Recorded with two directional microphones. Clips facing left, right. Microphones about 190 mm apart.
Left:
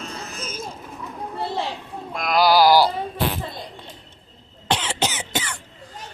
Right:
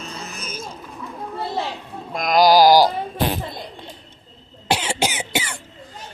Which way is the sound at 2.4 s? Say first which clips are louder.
Right 3 dB; 40° right (ahead or behind).